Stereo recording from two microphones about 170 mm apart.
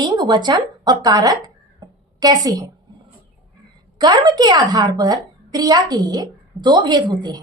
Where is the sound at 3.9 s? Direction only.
25° right (ahead or behind).